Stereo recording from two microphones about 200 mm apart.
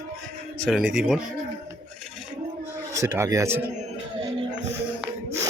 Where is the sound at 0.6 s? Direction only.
5° right (ahead or behind).